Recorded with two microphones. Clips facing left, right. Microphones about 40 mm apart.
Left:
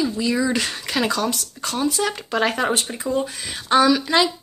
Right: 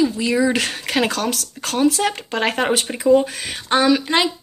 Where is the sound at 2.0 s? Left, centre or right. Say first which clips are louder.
Right 3 dB; right.